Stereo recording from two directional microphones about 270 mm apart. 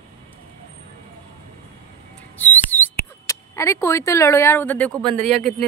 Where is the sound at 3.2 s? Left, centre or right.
Centre.